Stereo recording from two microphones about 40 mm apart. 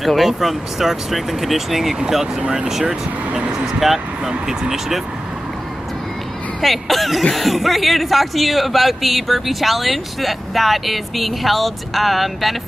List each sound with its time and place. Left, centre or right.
0.0 s speech: centre
2.4 s speech: right
6.6 s speech: centre